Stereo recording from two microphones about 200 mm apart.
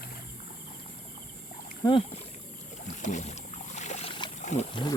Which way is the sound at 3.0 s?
35° left (ahead or behind).